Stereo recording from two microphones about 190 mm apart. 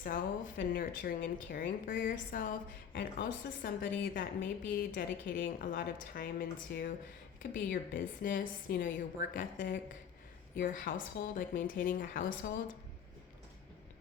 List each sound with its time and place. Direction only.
0.0 s speech: 50° left (ahead or behind)